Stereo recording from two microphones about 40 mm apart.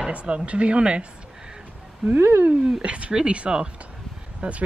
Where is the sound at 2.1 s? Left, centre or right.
Right.